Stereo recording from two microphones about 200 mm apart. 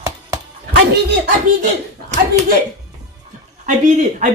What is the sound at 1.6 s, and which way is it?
Speech, 35° right (ahead or behind).